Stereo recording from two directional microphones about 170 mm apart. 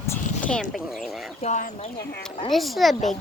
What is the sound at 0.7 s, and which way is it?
Speech, centre (ahead or behind).